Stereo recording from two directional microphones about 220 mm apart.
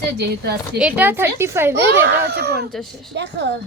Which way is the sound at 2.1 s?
45° right (ahead or behind).